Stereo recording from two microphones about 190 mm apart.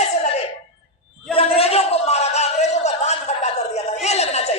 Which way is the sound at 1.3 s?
30° left (ahead or behind).